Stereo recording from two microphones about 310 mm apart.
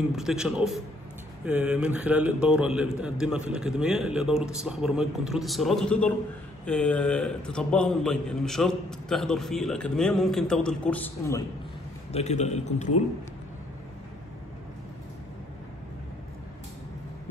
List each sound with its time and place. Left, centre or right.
0.1 s a man's voice: centre
12.1 s a man's voice: left